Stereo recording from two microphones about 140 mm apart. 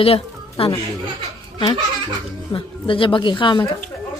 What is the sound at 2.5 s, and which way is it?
Speech, 40° left (ahead or behind).